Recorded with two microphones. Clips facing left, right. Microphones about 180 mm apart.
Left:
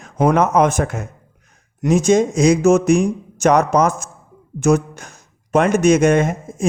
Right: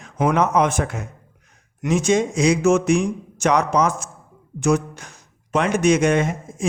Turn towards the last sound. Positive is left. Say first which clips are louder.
# left 4 dB
turn(degrees=45)  # may be behind; listen again after turning